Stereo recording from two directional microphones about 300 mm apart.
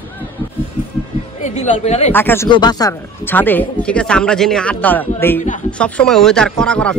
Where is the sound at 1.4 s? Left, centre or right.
Left.